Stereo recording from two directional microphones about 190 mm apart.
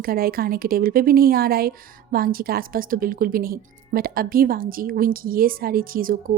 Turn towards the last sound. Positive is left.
turn(degrees=-45)  # may be behind; listen again after turning